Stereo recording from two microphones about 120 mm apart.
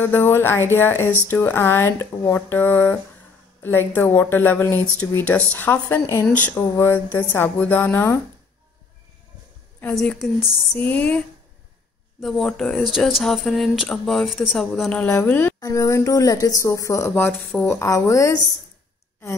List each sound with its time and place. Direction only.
0.0 s speech: 20° left (ahead or behind)
9.9 s speech: centre (ahead or behind)
14.9 s speech: 15° left (ahead or behind)
15.6 s speech: 30° left (ahead or behind)
17.1 s speech: 10° left (ahead or behind)
17.6 s speech: 25° left (ahead or behind)